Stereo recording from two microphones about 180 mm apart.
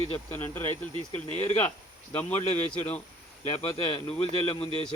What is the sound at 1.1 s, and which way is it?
Speech, 40° left (ahead or behind).